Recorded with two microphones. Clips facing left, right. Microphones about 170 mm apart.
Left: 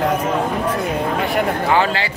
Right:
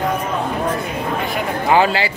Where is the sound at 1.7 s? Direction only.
10° right (ahead or behind).